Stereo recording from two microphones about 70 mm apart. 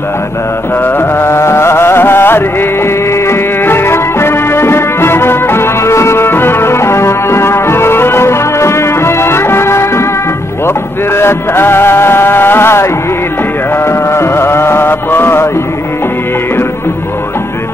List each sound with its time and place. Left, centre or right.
0.8 s music: left
11.1 s music: left